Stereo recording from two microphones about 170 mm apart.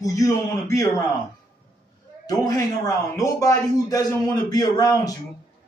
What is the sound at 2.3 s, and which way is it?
A man's voice, 20° left (ahead or behind).